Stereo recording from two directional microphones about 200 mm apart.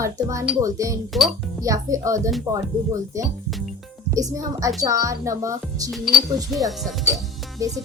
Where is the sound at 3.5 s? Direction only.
Centre (ahead or behind).